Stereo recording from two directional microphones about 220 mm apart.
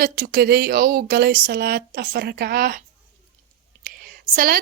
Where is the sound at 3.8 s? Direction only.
40° right (ahead or behind).